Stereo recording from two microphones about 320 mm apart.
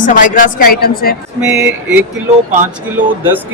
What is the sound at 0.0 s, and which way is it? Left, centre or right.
A woman's voice, left.